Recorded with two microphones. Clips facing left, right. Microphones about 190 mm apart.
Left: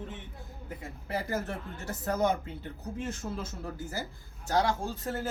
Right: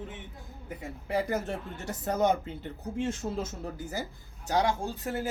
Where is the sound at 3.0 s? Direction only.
25° right (ahead or behind).